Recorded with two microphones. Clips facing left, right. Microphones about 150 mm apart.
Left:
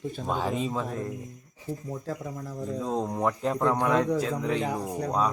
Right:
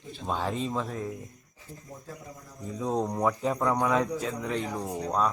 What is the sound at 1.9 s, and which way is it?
Speech, 90° left.